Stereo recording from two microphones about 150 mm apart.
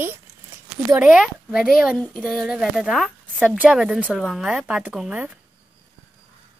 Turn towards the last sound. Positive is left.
turn(degrees=-10)  # may be behind; listen again after turning